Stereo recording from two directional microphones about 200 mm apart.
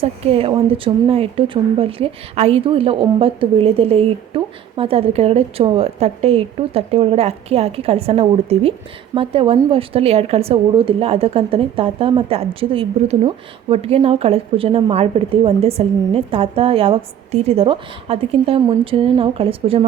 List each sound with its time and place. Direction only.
0.0 s speech: 30° right (ahead or behind)